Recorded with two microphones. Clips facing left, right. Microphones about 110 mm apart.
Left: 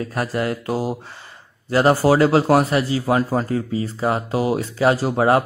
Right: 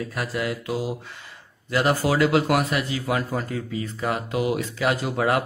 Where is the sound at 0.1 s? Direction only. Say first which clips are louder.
Left 5 dB; 40° left (ahead or behind).